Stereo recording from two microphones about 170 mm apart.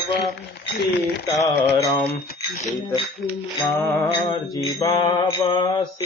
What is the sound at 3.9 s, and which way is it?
Mantra, 20° left (ahead or behind).